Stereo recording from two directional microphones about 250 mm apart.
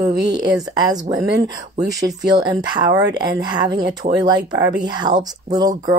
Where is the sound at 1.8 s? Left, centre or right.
Centre.